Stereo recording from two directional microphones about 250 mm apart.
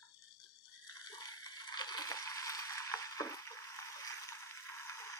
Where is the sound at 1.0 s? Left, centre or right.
Centre.